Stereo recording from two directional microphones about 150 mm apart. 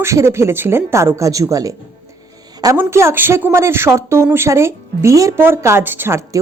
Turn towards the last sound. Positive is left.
turn(degrees=-20)  # may be behind; listen again after turning